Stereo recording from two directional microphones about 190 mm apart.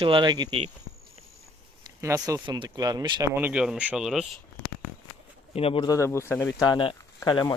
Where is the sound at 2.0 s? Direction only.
15° right (ahead or behind).